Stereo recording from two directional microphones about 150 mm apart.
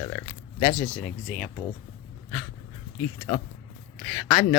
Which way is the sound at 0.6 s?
25° left (ahead or behind).